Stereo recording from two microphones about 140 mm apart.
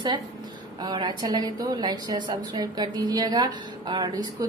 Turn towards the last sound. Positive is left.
turn(degrees=-25)  # may be behind; listen again after turning